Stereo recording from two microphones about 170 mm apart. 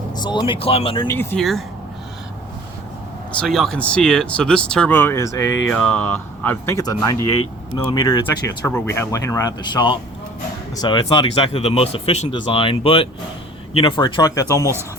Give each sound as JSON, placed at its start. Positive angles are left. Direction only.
{"t": 0.1, "sound": "speech", "side_deg": 25}
{"t": 1.0, "sound": "speech", "side_deg": 15}
{"t": 1.4, "sound": "speech", "side_deg": 0}
{"t": 3.4, "sound": "speech", "side_deg": 0}
{"t": 5.6, "sound": "speech", "side_deg": 5}
{"t": 7.7, "sound": "speech", "side_deg": 30}